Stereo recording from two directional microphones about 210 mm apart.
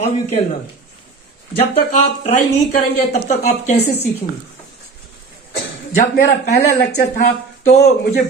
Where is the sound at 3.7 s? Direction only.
50° left (ahead or behind).